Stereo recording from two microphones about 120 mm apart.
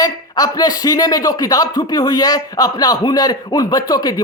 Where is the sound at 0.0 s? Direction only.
30° left (ahead or behind).